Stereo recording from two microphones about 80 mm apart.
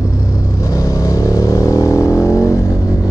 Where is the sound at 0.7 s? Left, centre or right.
Left.